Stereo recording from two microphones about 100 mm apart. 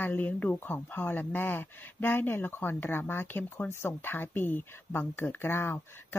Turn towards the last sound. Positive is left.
turn(degrees=25)  # may be behind; listen again after turning